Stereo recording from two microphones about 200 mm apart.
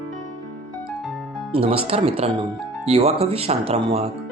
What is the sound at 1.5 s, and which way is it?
Speech, 30° right (ahead or behind).